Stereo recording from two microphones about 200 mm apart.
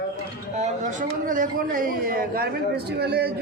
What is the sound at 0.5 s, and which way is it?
A man's voice, 40° right (ahead or behind).